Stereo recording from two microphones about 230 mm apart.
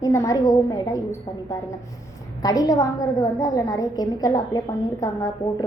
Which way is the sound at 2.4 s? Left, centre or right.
Centre.